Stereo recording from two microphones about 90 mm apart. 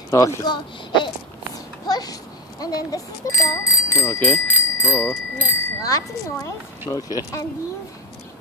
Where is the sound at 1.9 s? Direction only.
45° left (ahead or behind).